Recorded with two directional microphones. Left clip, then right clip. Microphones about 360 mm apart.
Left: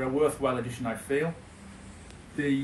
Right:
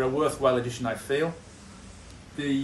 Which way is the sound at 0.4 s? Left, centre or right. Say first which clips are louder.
Right 5 dB; centre.